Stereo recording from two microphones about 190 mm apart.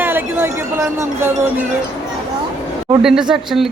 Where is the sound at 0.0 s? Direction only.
10° right (ahead or behind).